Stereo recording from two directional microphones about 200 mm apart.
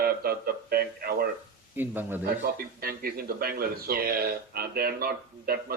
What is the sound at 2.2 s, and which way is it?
Speech, 50° right (ahead or behind).